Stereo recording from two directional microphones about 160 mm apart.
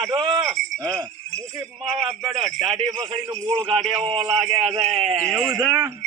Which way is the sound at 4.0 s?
30° right (ahead or behind).